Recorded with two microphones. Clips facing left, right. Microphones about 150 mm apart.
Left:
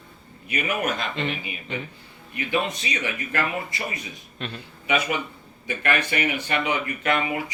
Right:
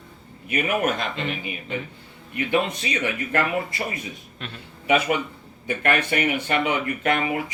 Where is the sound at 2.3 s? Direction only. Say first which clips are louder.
Right 3 dB; 55° right (ahead or behind).